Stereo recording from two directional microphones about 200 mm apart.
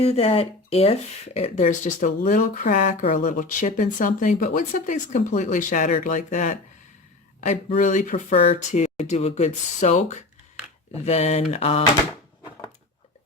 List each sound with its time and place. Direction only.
0.0 s speech: 30° left (ahead or behind)